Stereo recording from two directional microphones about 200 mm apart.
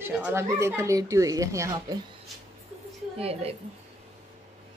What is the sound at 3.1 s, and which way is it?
Speech, 30° right (ahead or behind).